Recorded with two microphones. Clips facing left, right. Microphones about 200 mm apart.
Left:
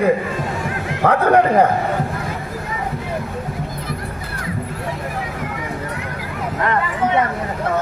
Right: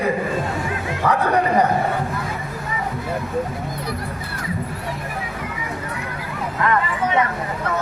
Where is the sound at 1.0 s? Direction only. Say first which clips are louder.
Left 5 dB; 55° left (ahead or behind).